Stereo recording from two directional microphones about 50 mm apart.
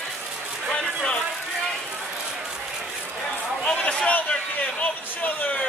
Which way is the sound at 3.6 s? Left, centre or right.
Left.